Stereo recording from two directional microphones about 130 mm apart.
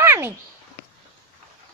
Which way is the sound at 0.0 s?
20° right (ahead or behind).